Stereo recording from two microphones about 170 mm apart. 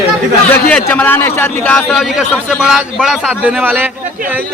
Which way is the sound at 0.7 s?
10° left (ahead or behind).